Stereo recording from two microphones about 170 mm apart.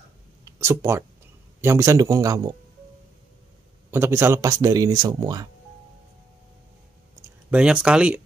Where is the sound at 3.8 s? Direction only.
15° right (ahead or behind).